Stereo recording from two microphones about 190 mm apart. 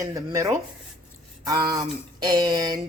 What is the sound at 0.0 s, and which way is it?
A woman's voice, 15° right (ahead or behind).